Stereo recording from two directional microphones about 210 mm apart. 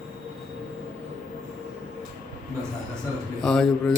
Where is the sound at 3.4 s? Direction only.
Centre (ahead or behind).